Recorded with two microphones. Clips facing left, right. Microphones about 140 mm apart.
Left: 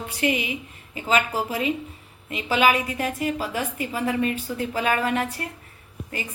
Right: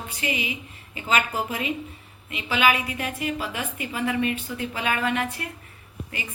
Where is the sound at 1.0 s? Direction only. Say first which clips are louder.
Left 2 dB; 35° left (ahead or behind).